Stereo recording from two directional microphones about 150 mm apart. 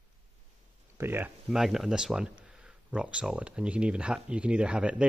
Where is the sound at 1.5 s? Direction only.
Centre (ahead or behind).